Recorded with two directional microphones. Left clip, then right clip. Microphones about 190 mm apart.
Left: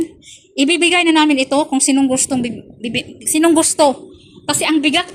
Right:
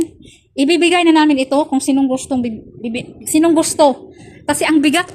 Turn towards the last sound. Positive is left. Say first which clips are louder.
# right 1 dB
turn(degrees=-30)  # may be behind; listen again after turning